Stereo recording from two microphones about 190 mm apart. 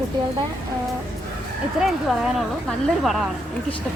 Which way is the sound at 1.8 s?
5° right (ahead or behind).